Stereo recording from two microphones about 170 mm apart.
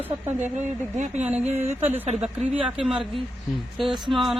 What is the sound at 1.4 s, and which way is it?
Speech, 40° right (ahead or behind).